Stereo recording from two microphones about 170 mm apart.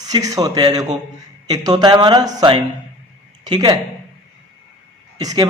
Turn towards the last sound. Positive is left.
turn(degrees=-20)  # may be behind; listen again after turning